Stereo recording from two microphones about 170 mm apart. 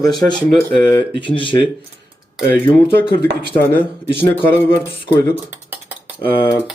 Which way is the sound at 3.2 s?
70° right (ahead or behind).